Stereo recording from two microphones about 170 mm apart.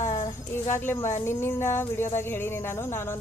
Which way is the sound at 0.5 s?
15° left (ahead or behind).